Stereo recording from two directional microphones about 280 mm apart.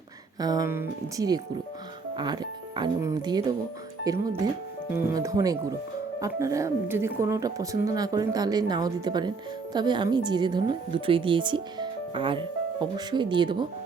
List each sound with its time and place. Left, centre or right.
0.3 s speech: centre